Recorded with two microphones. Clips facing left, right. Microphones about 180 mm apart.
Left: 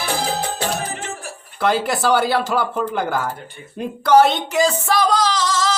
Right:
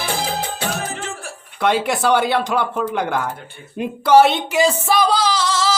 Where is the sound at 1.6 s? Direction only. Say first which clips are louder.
Right 1 dB; centre (ahead or behind).